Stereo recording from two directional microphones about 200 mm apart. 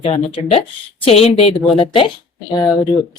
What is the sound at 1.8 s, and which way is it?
Speech, 25° left (ahead or behind).